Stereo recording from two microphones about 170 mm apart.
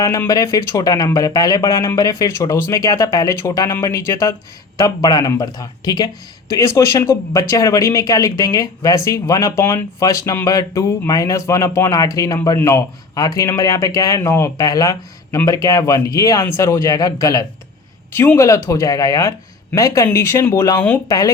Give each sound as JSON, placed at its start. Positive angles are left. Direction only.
{"t": 0.0, "sound": "speech", "side_deg": 20}